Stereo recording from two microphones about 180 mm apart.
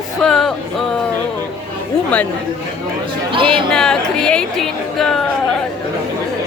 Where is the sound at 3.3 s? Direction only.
30° right (ahead or behind).